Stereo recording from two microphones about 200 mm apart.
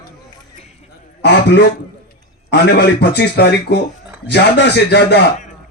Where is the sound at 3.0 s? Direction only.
55° left (ahead or behind).